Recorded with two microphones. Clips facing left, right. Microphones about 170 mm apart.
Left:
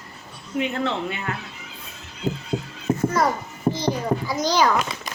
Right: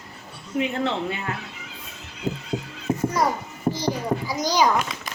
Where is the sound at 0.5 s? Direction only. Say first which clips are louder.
Even; 30° right (ahead or behind).